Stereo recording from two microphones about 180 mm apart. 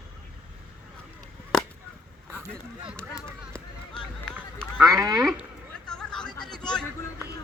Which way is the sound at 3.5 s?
5° left (ahead or behind).